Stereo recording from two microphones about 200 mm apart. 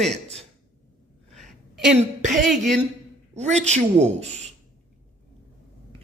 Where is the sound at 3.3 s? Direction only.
35° right (ahead or behind).